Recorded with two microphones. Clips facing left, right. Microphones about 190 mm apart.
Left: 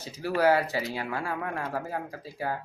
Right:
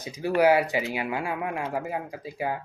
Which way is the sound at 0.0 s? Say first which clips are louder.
Right 3 dB; 15° right (ahead or behind).